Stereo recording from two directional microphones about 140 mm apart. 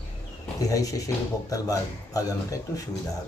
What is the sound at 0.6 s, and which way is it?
A man's voice, 25° left (ahead or behind).